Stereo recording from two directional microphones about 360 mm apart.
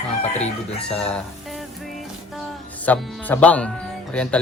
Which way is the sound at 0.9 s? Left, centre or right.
Centre.